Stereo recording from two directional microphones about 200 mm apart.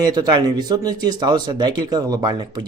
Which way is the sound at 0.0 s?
20° right (ahead or behind).